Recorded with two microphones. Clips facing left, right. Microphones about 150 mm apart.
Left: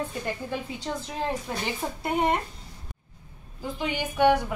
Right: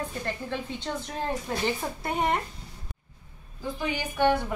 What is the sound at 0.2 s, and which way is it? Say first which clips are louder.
A woman's voice: left 1 dB; 10° left (ahead or behind).